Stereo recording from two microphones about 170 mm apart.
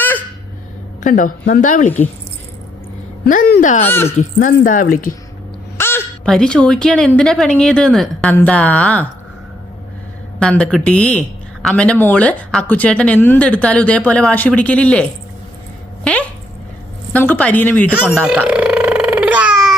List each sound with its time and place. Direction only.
1.0 s speech: 50° left (ahead or behind)
3.2 s speech: 60° left (ahead or behind)
3.8 s speech: 15° left (ahead or behind)
4.2 s speech: 50° left (ahead or behind)
5.7 s a sound: 15° left (ahead or behind)
6.2 s speech: 5° left (ahead or behind)
10.4 s speech: 5° left (ahead or behind)
17.1 s speech: 10° left (ahead or behind)
18.3 s burping: 5° right (ahead or behind)